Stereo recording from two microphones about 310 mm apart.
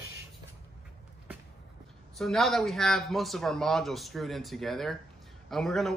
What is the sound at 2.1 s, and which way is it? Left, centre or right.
A man's voice, centre.